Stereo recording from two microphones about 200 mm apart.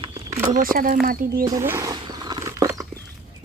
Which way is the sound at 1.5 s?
15° right (ahead or behind).